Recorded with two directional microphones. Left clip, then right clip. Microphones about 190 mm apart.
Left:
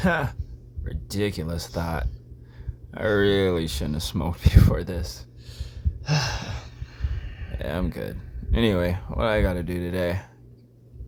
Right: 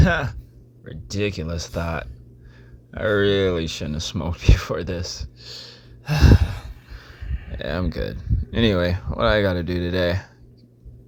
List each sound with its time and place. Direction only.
0.0 s speech: 5° right (ahead or behind)
5.4 s a sound: 30° right (ahead or behind)
6.1 s speech: 10° right (ahead or behind)